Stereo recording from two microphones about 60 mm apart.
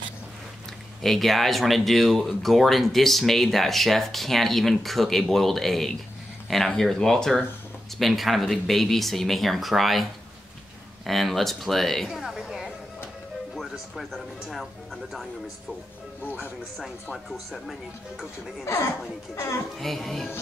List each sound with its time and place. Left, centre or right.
1.0 s speech: centre
11.1 s speech: centre
12.2 s a sound: centre
13.6 s speech: centre
17.1 s speech: centre
18.6 s speech: left
19.8 s speech: centre